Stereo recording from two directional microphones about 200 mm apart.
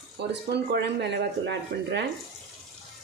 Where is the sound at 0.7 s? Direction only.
55° right (ahead or behind).